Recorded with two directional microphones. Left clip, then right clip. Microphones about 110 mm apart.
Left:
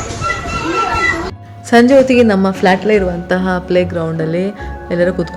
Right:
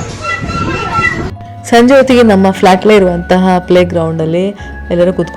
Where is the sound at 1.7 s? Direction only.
40° right (ahead or behind).